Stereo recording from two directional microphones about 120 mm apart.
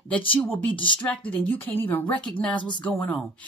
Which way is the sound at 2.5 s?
40° left (ahead or behind).